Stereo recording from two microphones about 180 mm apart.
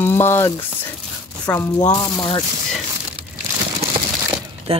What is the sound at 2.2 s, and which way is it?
Speech, 30° left (ahead or behind).